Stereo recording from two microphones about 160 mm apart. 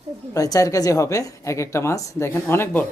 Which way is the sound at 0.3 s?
20° left (ahead or behind).